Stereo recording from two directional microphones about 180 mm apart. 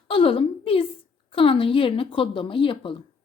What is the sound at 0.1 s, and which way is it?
A woman's voice, 30° left (ahead or behind).